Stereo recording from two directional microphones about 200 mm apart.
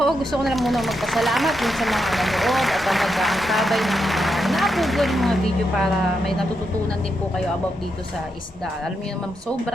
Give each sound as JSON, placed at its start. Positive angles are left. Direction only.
{"t": 0.0, "sound": "speech", "side_deg": 0}